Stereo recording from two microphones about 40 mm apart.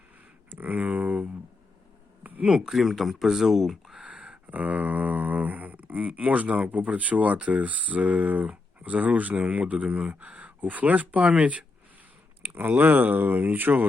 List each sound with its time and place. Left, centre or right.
0.5 s speech: right
2.5 s speech: centre
2.7 s speech: centre
4.0 s a sound: right
8.4 s speech: right
12.5 s speech: right